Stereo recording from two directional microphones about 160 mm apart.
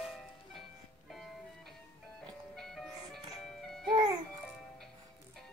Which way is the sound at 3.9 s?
30° right (ahead or behind).